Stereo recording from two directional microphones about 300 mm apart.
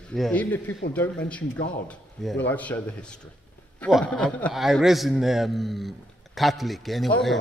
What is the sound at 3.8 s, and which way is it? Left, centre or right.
A man's voice, centre.